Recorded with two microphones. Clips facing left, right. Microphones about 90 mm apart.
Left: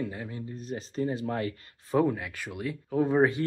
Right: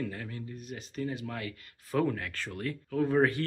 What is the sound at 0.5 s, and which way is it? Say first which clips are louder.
Speech: left 7 dB; 35° left (ahead or behind).